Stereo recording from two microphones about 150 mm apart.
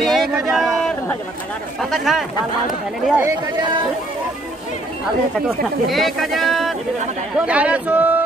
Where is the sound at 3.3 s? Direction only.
30° right (ahead or behind).